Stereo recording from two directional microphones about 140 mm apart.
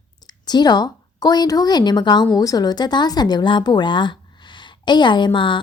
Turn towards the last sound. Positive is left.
turn(degrees=35)  # may be behind; listen again after turning